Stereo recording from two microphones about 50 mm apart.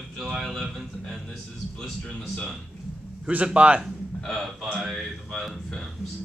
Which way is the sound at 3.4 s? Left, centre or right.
Right.